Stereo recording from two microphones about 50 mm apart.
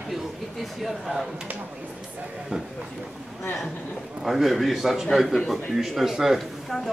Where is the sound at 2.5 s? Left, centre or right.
Centre.